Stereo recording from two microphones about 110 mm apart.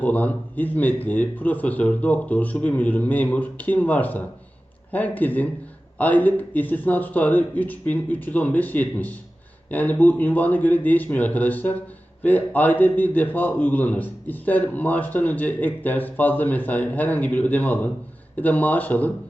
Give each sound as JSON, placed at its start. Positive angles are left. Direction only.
{"t": 0.0, "sound": "a man's voice", "side_deg": 15}